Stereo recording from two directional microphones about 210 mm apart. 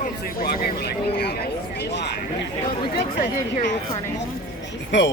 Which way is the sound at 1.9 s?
55° left (ahead or behind).